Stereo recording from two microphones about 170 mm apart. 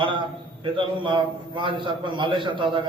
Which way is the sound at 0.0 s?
30° right (ahead or behind).